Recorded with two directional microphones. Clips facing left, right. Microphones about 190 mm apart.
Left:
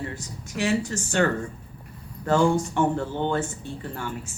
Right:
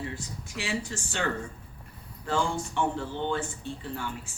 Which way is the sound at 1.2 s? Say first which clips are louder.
Left 8 dB; 55° left (ahead or behind).